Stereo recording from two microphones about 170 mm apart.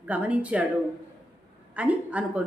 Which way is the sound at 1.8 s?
10° right (ahead or behind).